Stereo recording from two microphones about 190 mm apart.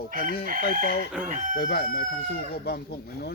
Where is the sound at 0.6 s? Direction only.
55° left (ahead or behind).